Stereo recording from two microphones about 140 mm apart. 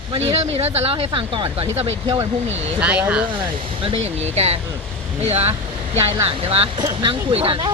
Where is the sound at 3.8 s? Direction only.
45° right (ahead or behind).